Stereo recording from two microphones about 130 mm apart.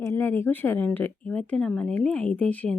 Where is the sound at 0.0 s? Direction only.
20° left (ahead or behind).